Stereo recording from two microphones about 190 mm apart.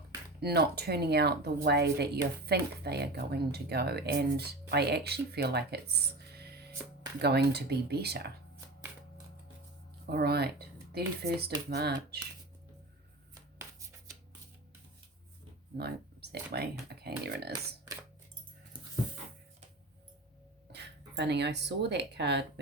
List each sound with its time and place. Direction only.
0.3 s speech: 55° right (ahead or behind)
10.1 s speech: 55° right (ahead or behind)
13.6 s shuffling cards: 15° right (ahead or behind)
16.3 s speech: 55° right (ahead or behind)
20.7 s speech: 65° right (ahead or behind)